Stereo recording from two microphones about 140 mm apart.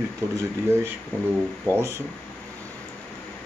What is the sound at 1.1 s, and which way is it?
Speech, 15° left (ahead or behind).